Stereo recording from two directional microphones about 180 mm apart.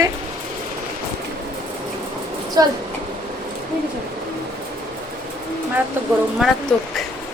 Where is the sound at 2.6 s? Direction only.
20° right (ahead or behind).